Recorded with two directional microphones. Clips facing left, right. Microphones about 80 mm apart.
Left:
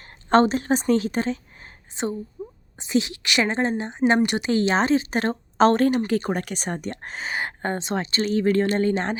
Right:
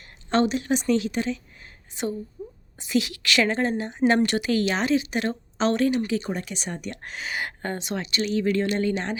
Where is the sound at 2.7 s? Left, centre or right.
Left.